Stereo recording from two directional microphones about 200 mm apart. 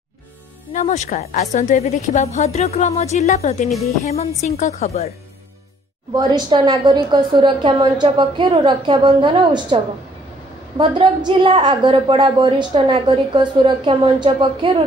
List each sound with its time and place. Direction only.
0.7 s a woman's voice: 35° left (ahead or behind)
6.1 s a woman's voice: 20° right (ahead or behind)
10.8 s a woman's voice: 25° right (ahead or behind)